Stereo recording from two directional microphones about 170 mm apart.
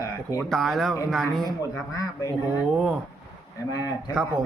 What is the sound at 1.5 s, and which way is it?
Speech, 20° left (ahead or behind).